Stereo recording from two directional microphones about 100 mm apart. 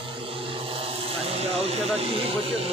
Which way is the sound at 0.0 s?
60° right (ahead or behind).